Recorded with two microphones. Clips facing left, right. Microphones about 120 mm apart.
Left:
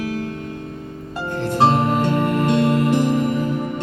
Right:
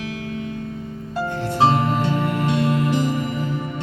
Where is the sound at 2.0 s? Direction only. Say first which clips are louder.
Left 3 dB; 50° left (ahead or behind).